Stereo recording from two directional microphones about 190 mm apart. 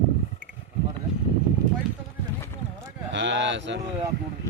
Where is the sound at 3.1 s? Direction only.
70° right (ahead or behind).